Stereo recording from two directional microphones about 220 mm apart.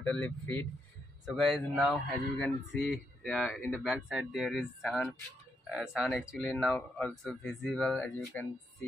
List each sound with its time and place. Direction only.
0.0 s speech: 5° left (ahead or behind)